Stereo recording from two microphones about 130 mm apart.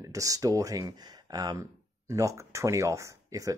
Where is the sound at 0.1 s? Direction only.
25° right (ahead or behind).